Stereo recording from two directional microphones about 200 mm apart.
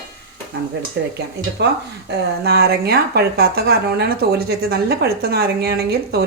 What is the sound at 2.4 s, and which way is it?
A woman's voice, 50° right (ahead or behind).